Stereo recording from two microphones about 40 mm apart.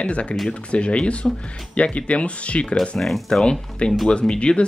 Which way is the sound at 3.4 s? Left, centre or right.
Left.